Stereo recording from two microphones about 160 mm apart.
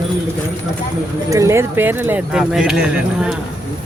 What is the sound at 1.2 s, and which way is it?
Speech, 20° right (ahead or behind).